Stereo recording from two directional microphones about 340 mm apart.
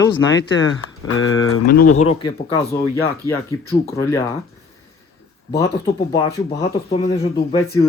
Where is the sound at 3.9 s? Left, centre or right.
Centre.